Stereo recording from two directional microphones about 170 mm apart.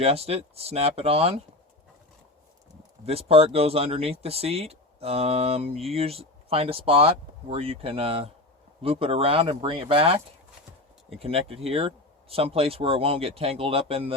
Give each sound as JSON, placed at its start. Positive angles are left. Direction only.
{"t": 0.0, "sound": "speech", "side_deg": -35}
{"t": 3.1, "sound": "speech", "side_deg": -35}
{"t": 11.2, "sound": "speech", "side_deg": -35}